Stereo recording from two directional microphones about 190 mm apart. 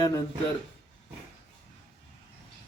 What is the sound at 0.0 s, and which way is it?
Speech, 20° left (ahead or behind).